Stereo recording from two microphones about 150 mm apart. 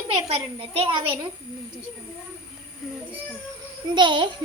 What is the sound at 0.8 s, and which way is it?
Speech, 35° right (ahead or behind).